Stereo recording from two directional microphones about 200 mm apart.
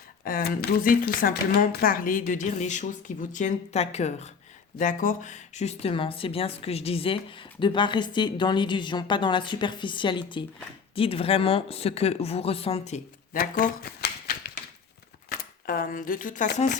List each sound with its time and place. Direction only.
0.3 s speech: 50° left (ahead or behind); by 13.0 s 30° left (ahead or behind)
13.3 s typewriter: 45° left (ahead or behind)
15.3 s speech: 45° left (ahead or behind)